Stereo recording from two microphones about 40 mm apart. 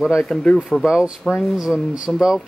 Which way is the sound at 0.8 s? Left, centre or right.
Centre.